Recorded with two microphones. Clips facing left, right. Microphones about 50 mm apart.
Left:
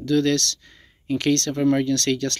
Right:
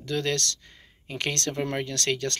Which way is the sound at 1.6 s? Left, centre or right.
Centre.